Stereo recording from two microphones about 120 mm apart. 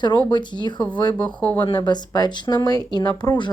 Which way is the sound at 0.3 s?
40° left (ahead or behind).